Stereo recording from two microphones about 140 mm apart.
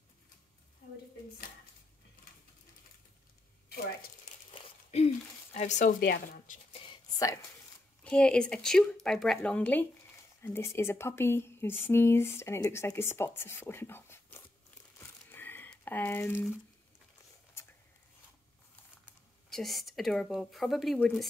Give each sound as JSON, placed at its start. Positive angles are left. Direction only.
{"t": 4.9, "sound": "speech", "side_deg": 50}
{"t": 8.0, "sound": "speech", "side_deg": 5}
{"t": 15.0, "sound": "crumpling", "side_deg": 15}
{"t": 19.5, "sound": "speech", "side_deg": 0}